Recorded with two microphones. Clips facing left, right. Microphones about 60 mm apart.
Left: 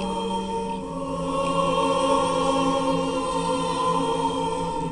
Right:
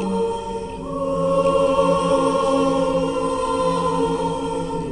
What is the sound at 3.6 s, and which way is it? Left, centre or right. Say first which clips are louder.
Music: right 4 dB; right.